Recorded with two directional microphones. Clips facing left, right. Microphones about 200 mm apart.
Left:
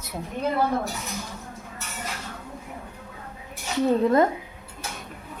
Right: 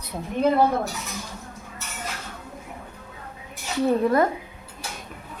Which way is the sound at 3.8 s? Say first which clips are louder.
Even; 20° left (ahead or behind).